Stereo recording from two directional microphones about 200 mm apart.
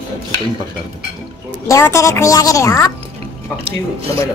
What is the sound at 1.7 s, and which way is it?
A woman's voice, 15° left (ahead or behind).